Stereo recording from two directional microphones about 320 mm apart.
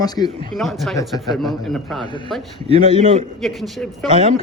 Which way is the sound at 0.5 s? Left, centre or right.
Centre.